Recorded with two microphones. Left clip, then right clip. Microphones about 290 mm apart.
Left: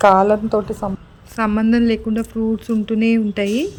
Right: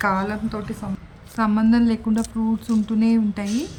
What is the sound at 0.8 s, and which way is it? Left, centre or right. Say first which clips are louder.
Speech: left 9 dB; left.